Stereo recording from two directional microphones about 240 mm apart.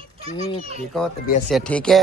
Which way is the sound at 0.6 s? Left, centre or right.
Right.